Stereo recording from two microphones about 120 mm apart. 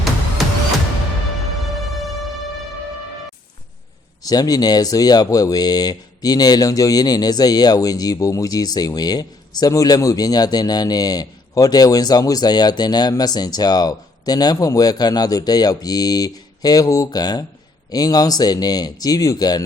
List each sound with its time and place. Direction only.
0.4 s music: centre (ahead or behind)
4.2 s speech: 30° left (ahead or behind)